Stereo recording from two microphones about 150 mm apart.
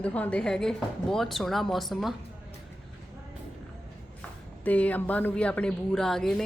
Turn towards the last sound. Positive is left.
turn(degrees=5)  # may be behind; listen again after turning